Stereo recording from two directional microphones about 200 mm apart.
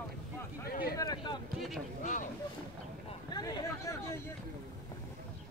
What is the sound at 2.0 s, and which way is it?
Vehicle, 40° left (ahead or behind).